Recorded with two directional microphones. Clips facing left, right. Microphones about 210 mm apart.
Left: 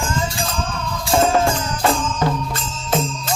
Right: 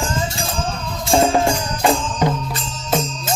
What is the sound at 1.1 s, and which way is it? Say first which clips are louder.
Music: right 1 dB; 15° right (ahead or behind).